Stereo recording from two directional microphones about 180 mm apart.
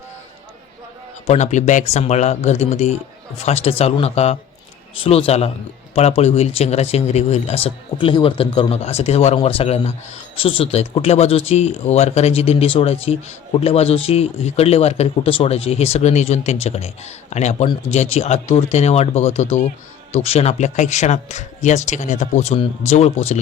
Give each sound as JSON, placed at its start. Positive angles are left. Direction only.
{"t": 1.3, "sound": "speech", "side_deg": 40}